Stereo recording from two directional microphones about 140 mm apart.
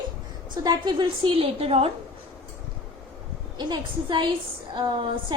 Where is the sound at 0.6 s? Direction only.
30° right (ahead or behind).